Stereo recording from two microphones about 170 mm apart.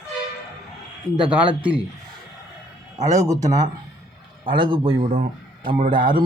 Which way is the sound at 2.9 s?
20° right (ahead or behind).